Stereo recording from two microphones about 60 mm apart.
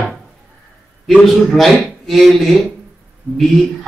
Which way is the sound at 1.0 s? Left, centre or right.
Centre.